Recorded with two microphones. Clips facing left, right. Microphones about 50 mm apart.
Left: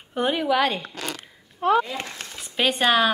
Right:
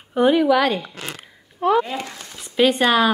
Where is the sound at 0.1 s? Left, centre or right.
Centre.